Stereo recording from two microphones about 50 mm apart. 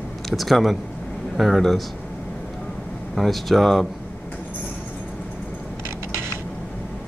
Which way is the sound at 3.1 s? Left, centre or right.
Centre.